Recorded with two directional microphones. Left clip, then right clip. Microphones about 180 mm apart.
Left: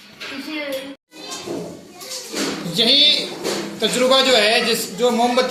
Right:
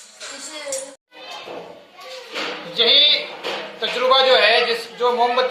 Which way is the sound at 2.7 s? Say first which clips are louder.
Even; 40° left (ahead or behind).